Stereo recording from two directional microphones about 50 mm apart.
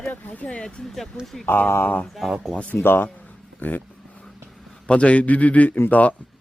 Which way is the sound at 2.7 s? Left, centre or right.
Left.